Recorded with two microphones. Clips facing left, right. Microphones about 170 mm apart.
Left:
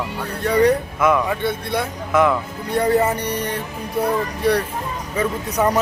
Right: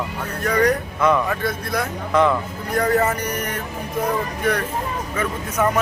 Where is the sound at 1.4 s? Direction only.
25° left (ahead or behind).